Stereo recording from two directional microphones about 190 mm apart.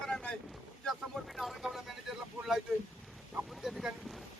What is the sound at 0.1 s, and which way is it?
Boat, 5° left (ahead or behind).